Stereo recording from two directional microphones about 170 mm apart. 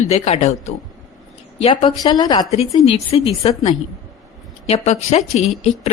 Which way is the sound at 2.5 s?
35° left (ahead or behind).